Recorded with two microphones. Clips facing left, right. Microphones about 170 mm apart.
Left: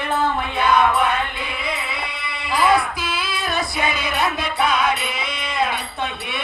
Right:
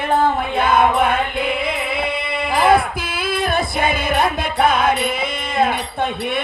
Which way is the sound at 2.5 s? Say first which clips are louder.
Right 3 dB; 55° right (ahead or behind).